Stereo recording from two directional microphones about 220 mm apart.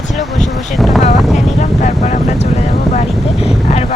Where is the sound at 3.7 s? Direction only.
30° left (ahead or behind).